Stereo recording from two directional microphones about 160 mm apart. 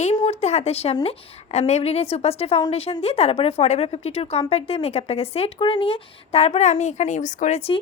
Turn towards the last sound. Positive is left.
turn(degrees=50)  # may be behind; listen again after turning